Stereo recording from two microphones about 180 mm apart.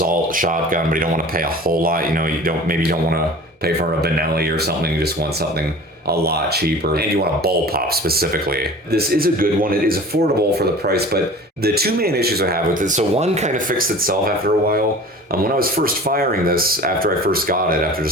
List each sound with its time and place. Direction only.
0.0 s speech: 50° right (ahead or behind)